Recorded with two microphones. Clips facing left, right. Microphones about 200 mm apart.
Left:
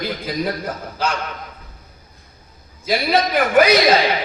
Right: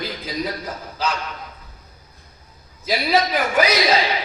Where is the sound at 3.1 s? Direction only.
55° left (ahead or behind).